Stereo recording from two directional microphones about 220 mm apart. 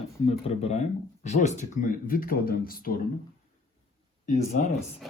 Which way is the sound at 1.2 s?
30° left (ahead or behind).